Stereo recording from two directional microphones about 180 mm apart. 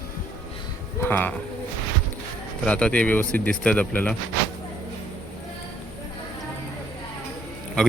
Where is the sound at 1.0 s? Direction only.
10° left (ahead or behind).